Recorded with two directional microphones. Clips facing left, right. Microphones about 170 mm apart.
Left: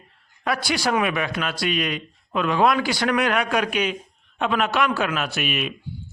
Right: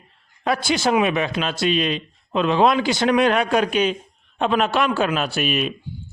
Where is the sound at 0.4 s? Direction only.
25° right (ahead or behind).